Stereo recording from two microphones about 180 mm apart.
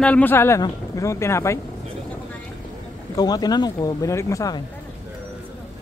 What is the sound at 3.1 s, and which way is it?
Speech, 20° left (ahead or behind).